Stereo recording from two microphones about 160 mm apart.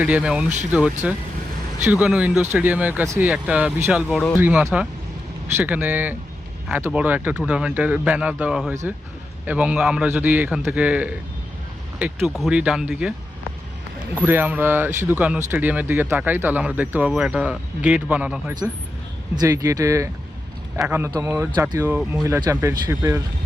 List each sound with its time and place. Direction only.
0.0 s speech: 5° right (ahead or behind)
0.4 s speech: 45° right (ahead or behind)
0.7 s speech: 5° right (ahead or behind)
4.1 s speech: 10° left (ahead or behind)
4.4 s speech: 15° right (ahead or behind)
14.2 s speech: 10° right (ahead or behind)
19.4 s speech: 20° right (ahead or behind)
22.2 s speech: 20° right (ahead or behind)